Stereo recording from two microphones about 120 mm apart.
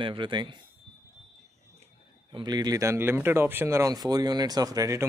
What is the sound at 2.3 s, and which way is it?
Speech, 35° right (ahead or behind).